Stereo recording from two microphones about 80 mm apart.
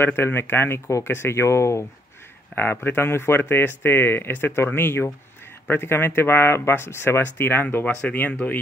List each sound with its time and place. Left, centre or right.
0.0 s speech: left
2.5 s speech: left